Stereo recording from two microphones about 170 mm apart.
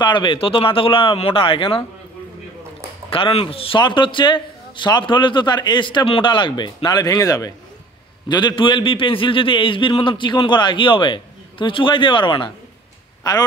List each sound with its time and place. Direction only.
0.0 s speech: 25° left (ahead or behind)
3.1 s a man's voice: 30° left (ahead or behind)